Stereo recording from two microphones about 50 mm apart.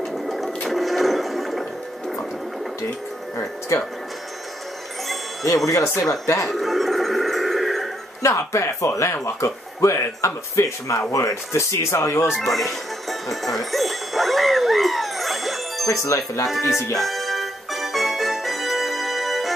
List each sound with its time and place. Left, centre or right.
0.7 s music: centre
3.3 s speech: left
5.9 s speech: left
6.5 s music: centre
8.2 s speech: left
12.3 s speech: centre
13.3 s music: centre
15.9 s speech: left
16.4 s music: centre